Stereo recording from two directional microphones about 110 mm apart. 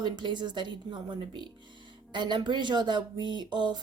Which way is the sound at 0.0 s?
45° right (ahead or behind).